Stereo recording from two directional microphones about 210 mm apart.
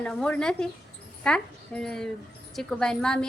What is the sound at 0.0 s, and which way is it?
A woman's voice, 5° left (ahead or behind).